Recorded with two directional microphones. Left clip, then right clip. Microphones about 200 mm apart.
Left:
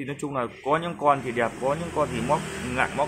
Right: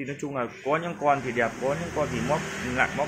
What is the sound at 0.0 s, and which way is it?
Speech, 10° left (ahead or behind).